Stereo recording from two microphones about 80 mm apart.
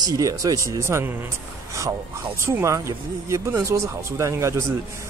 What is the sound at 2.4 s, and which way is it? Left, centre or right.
Speech, right.